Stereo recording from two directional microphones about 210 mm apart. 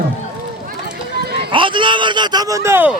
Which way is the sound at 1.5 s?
25° right (ahead or behind).